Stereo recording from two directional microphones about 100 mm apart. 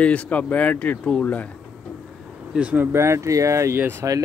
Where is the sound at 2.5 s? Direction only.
15° right (ahead or behind).